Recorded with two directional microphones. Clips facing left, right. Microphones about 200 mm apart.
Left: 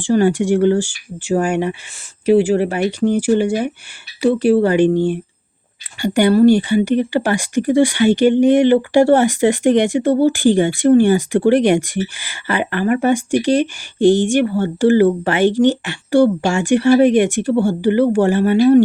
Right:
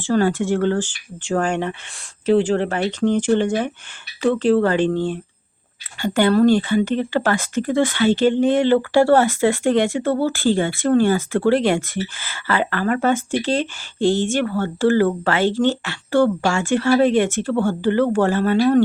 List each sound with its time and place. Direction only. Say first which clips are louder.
0.0 s speech: left 4 dB; 15° left (ahead or behind)